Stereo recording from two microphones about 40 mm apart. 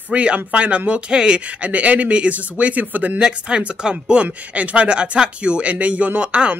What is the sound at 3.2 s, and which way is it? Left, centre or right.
Speech, right.